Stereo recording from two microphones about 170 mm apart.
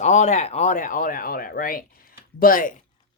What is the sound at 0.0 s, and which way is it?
Speech, 45° left (ahead or behind).